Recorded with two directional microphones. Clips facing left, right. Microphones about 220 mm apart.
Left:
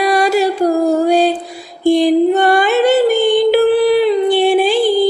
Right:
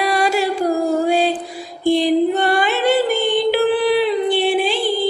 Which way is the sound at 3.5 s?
40° left (ahead or behind).